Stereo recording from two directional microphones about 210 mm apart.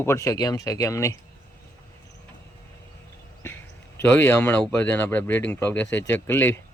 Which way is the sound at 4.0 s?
10° left (ahead or behind).